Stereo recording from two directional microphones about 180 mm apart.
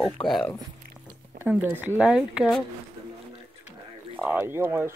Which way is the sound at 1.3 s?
10° right (ahead or behind).